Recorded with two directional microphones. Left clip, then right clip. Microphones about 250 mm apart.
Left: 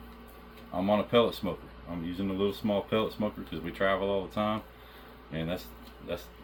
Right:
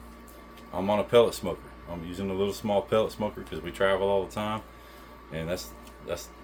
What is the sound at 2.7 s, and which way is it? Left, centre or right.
Speech, right.